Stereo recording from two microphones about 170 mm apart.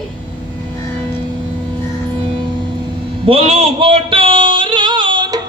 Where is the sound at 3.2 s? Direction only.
35° right (ahead or behind).